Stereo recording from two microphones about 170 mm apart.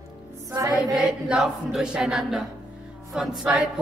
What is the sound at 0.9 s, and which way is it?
Speech, centre (ahead or behind).